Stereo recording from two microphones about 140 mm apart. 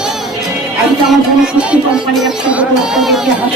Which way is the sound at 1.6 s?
5° right (ahead or behind).